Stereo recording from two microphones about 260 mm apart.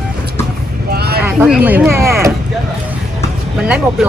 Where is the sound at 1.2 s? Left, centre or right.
Centre.